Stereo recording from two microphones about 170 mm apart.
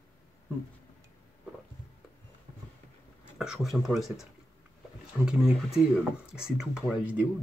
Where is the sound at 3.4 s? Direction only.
Centre (ahead or behind).